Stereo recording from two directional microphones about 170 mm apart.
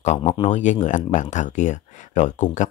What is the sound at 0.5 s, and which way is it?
Speech, 45° left (ahead or behind).